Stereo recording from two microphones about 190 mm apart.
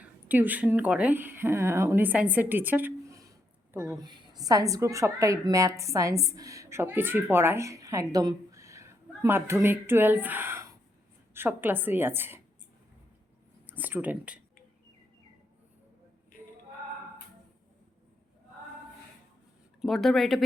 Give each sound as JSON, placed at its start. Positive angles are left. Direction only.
{"t": 0.0, "sound": "a woman's voice", "side_deg": -10}
{"t": 13.7, "sound": "speech", "side_deg": -10}
{"t": 19.8, "sound": "speech", "side_deg": 0}